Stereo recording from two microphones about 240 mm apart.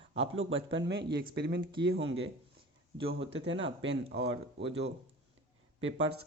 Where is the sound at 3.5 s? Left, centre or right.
Right.